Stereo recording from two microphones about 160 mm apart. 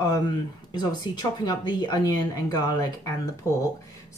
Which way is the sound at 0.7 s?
25° left (ahead or behind).